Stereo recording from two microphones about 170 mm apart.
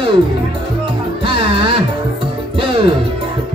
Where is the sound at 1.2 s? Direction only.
30° right (ahead or behind).